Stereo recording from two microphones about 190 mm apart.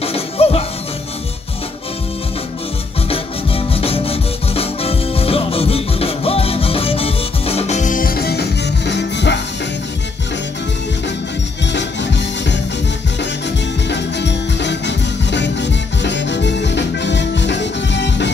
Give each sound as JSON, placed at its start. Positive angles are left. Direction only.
{"t": 0.0, "sound": "music", "side_deg": 30}
{"t": 3.1, "sound": "music", "side_deg": 30}
{"t": 11.6, "sound": "music", "side_deg": 70}
{"t": 13.8, "sound": "music", "side_deg": 65}